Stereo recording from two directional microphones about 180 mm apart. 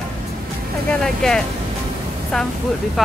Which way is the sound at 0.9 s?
5° left (ahead or behind).